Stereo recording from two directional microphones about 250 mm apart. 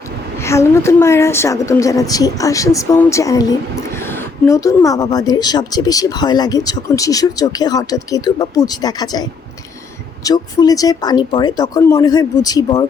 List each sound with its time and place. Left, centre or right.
0.3 s a woman's voice: centre
10.2 s a woman's voice: centre